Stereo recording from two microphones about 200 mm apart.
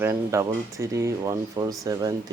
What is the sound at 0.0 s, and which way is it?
Speech, 15° right (ahead or behind).